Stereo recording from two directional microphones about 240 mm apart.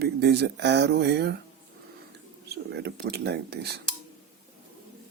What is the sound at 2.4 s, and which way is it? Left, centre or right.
Speech, right.